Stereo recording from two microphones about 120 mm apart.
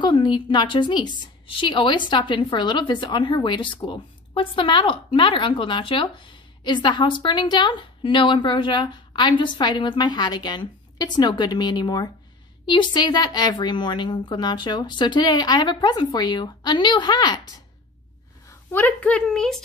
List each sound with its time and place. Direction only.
0.0 s a woman's voice: 40° left (ahead or behind)
18.5 s a woman's voice: 15° left (ahead or behind)